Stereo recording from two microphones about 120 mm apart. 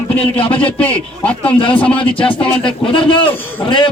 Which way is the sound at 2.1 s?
45° left (ahead or behind).